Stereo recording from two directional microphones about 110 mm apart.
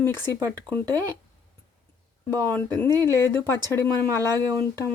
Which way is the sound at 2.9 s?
35° right (ahead or behind).